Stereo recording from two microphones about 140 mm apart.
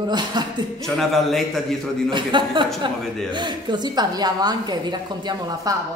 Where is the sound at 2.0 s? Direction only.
35° right (ahead or behind).